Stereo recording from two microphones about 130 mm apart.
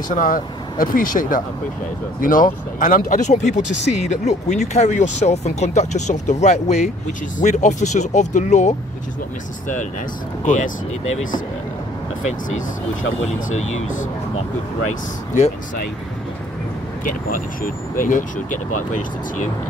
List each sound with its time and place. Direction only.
0.1 s speech: 90° left; by 8.7 s 65° left (ahead or behind)
10.4 s speech: 80° left
17.9 s speech: 90° left
18.9 s speech: 70° left (ahead or behind)